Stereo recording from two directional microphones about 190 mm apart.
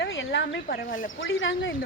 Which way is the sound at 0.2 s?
70° left (ahead or behind).